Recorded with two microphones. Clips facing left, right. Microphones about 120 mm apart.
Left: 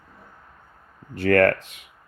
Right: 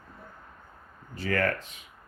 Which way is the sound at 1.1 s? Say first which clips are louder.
Left 10 dB; 65° left (ahead or behind).